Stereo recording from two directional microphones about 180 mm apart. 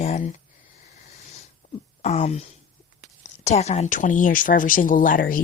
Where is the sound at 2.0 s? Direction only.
35° left (ahead or behind).